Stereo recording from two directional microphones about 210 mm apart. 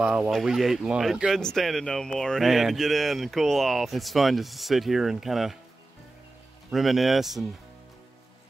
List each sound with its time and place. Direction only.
0.0 s speech: 5° right (ahead or behind)
6.7 s speech: centre (ahead or behind)